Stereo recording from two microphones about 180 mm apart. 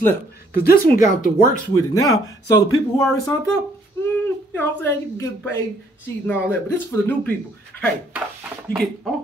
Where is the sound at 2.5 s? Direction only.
15° left (ahead or behind).